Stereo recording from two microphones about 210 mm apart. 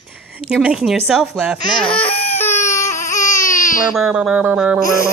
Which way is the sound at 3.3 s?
40° left (ahead or behind).